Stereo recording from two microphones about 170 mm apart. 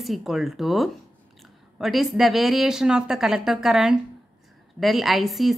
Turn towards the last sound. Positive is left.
turn(degrees=0)  # may be behind; listen again after turning